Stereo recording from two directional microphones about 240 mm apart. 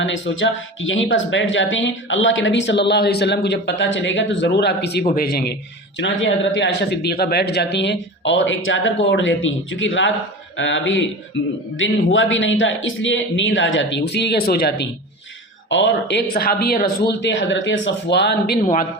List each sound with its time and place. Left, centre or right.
0.0 s speech: left